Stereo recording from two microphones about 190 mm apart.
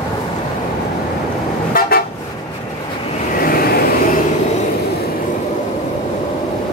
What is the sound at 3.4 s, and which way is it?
Vehicle, 50° left (ahead or behind).